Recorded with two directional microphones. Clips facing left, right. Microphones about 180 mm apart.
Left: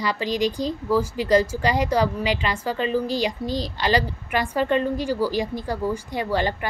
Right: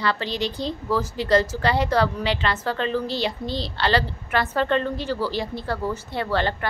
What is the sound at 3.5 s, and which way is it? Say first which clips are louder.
Speech: left 2 dB; 40° left (ahead or behind).